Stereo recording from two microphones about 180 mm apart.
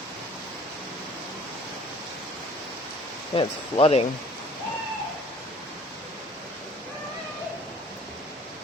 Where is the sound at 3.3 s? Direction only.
30° left (ahead or behind).